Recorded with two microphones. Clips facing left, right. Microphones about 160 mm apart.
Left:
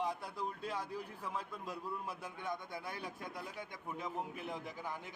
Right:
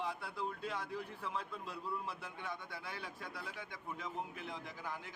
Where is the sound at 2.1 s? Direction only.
15° left (ahead or behind).